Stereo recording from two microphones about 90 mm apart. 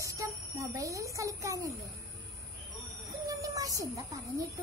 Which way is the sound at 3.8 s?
40° right (ahead or behind).